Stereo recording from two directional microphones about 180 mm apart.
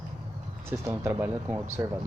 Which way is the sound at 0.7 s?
15° right (ahead or behind).